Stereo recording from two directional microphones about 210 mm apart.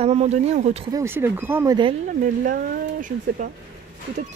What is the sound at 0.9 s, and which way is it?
Speech, 10° right (ahead or behind).